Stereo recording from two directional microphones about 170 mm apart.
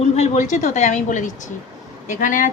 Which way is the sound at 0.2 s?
45° left (ahead or behind).